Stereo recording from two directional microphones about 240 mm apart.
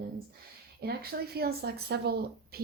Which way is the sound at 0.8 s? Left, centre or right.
Right.